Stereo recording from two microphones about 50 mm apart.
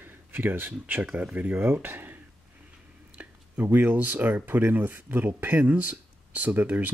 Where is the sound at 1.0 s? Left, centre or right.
Right.